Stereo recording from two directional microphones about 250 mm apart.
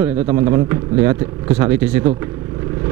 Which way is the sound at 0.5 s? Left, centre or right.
Centre.